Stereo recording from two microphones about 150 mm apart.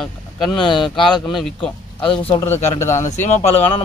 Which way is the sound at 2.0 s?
35° left (ahead or behind).